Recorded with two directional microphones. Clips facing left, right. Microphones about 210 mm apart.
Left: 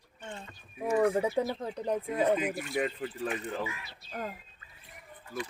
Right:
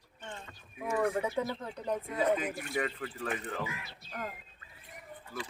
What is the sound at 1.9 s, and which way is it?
A woman's voice, 15° left (ahead or behind).